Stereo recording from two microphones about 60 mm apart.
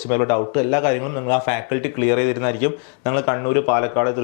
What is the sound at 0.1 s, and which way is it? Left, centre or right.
A man's voice, left.